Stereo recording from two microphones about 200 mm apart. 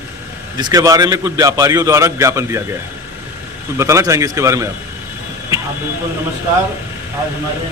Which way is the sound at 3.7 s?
15° right (ahead or behind).